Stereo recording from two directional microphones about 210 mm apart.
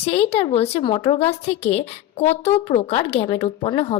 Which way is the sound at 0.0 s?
30° left (ahead or behind).